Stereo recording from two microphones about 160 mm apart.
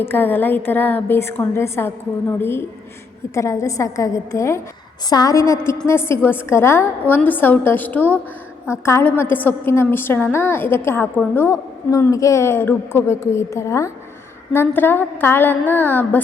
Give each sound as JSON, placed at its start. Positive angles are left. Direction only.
{"t": 0.0, "sound": "a woman's voice", "side_deg": 10}